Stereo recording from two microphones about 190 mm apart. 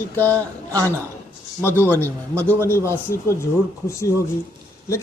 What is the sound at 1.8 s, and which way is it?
Speech, 10° left (ahead or behind).